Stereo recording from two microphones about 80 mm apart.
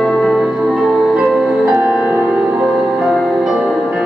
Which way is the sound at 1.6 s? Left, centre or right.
Right.